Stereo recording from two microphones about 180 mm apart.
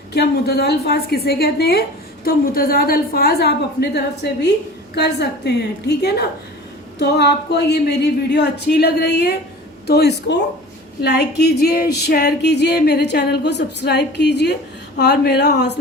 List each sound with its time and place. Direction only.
0.1 s music: 65° left (ahead or behind)
7.0 s speech: 70° left (ahead or behind)
11.0 s music: 65° left (ahead or behind)
14.9 s speech: 65° left (ahead or behind)